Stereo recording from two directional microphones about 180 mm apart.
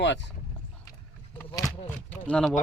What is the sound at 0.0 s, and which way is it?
Speech, 80° left.